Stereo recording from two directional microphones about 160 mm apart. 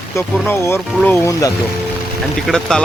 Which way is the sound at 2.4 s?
5° left (ahead or behind).